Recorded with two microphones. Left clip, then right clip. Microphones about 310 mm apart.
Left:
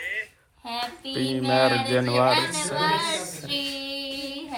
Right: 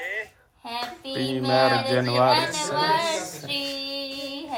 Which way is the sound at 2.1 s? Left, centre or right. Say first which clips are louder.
Right 1 dB; centre.